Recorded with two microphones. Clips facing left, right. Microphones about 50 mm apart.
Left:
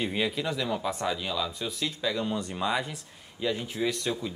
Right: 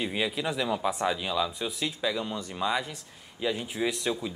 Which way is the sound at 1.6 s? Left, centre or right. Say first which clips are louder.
Right 1 dB; right.